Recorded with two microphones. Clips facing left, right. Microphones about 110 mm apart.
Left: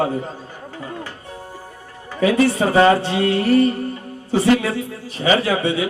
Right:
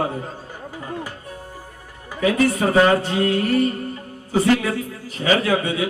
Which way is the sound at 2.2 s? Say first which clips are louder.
Left 2 dB; 30° left (ahead or behind).